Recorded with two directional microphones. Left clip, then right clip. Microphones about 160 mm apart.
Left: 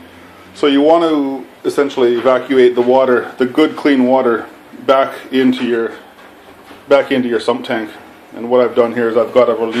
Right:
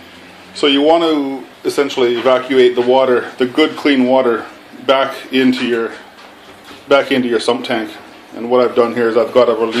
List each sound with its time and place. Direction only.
0.6 s speech: 15° left (ahead or behind)
6.9 s speech: 5° left (ahead or behind)